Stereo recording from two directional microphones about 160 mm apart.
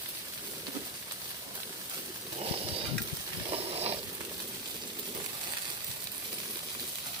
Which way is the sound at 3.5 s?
40° right (ahead or behind).